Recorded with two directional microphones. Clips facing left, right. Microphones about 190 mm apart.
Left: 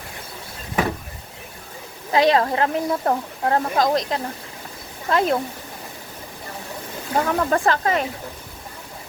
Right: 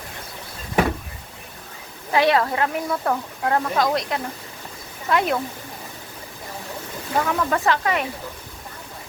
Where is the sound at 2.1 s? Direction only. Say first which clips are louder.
Left 1 dB; 20° left (ahead or behind).